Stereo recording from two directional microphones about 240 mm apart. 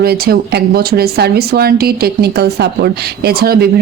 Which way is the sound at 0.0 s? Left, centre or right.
Right.